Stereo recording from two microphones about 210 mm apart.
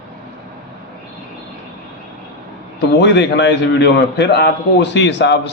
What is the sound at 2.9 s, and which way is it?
A man's voice, 55° left (ahead or behind).